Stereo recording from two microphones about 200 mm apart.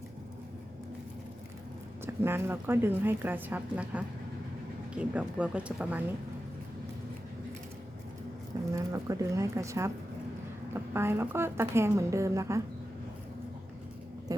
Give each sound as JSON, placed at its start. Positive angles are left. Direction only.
{"t": 2.0, "sound": "a woman's voice", "side_deg": -10}
{"t": 8.7, "sound": "a woman's voice", "side_deg": -15}
{"t": 10.9, "sound": "a woman's voice", "side_deg": -10}
{"t": 14.3, "sound": "a sound", "side_deg": -20}